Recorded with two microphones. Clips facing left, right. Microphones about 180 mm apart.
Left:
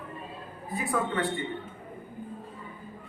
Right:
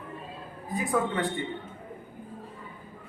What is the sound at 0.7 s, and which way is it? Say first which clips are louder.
Speech: right 2 dB; 20° right (ahead or behind).